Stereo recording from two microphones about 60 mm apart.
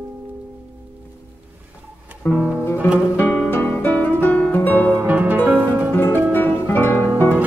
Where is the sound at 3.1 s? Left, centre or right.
Left.